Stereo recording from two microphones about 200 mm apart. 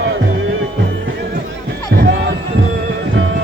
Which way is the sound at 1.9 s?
55° right (ahead or behind).